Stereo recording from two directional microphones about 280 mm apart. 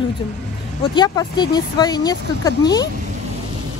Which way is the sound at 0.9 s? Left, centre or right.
Centre.